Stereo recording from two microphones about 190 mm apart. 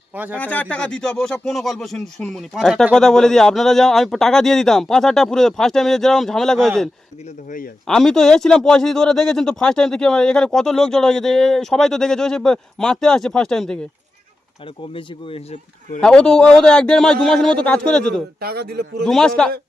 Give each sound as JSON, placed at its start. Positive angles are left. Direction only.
{"t": 0.3, "sound": "speech", "side_deg": 10}
{"t": 16.0, "sound": "speech", "side_deg": 5}
{"t": 18.3, "sound": "speech", "side_deg": -55}
{"t": 19.0, "sound": "speech", "side_deg": 5}